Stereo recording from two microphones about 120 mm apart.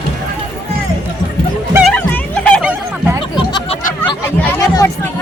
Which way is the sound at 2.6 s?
10° right (ahead or behind).